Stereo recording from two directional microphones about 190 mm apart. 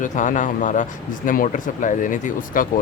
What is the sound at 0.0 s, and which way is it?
Speech, 40° left (ahead or behind).